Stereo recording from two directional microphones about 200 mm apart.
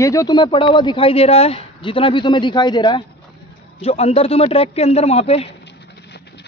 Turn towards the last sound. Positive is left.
turn(degrees=30)  # may be behind; listen again after turning